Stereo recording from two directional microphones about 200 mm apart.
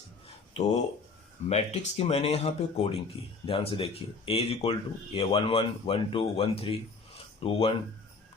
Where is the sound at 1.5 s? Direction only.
30° left (ahead or behind).